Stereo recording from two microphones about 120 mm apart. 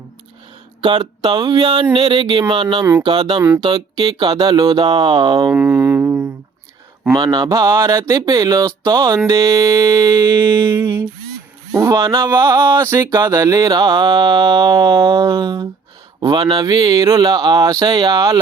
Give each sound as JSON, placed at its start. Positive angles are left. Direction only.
{"t": 0.8, "sound": "mantra", "side_deg": -40}
{"t": 5.5, "sound": "a sound", "side_deg": -15}
{"t": 7.2, "sound": "mantra", "side_deg": -40}
{"t": 7.9, "sound": "speech", "side_deg": -30}
{"t": 13.1, "sound": "mantra", "side_deg": -30}
{"t": 16.2, "sound": "mantra", "side_deg": -40}